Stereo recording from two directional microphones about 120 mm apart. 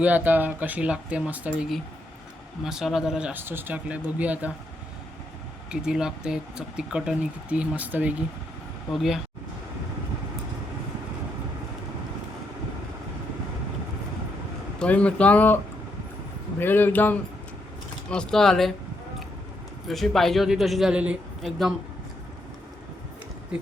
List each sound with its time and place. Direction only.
0.0 s speech: 15° right (ahead or behind)
2.6 s a man's voice: 5° right (ahead or behind)
5.7 s speech: 5° right (ahead or behind)
8.9 s a man's voice: centre (ahead or behind)
14.8 s speech: 10° left (ahead or behind)
16.6 s a man's voice: 15° left (ahead or behind)
19.9 s a man's voice: centre (ahead or behind)